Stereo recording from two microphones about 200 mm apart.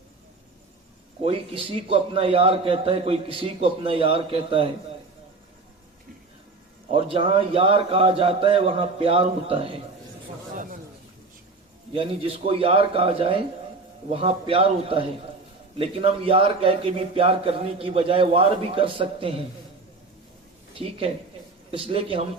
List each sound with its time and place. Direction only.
1.2 s a man's voice: 30° right (ahead or behind)
6.9 s a man's voice: 25° right (ahead or behind)
10.5 s a sound: 40° right (ahead or behind)
11.9 s a man's voice: 25° right (ahead or behind)
21.7 s a man's voice: 30° right (ahead or behind)